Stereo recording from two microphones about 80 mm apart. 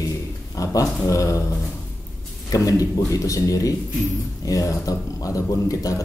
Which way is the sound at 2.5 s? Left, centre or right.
Left.